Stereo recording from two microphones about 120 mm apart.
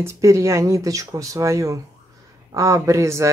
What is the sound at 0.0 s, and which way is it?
Speech, 25° right (ahead or behind).